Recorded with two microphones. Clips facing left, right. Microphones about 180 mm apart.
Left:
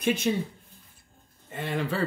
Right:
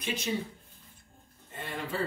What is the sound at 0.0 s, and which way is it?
Speech, 50° left (ahead or behind).